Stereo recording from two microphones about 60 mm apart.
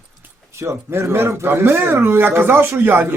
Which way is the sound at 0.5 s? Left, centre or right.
Right.